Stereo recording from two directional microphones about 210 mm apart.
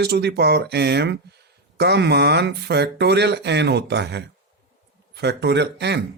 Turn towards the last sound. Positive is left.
turn(degrees=-55)  # may be behind; listen again after turning